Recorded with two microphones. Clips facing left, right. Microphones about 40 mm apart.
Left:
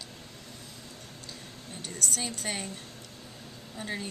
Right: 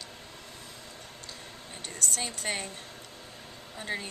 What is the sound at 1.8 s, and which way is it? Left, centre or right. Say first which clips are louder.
Speech: even; centre.